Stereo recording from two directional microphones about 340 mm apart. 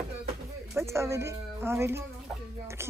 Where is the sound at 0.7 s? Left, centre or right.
Centre.